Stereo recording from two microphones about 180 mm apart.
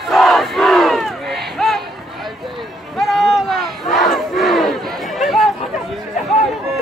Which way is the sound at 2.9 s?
Centre (ahead or behind).